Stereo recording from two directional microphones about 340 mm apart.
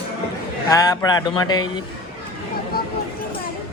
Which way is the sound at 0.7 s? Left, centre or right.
Centre.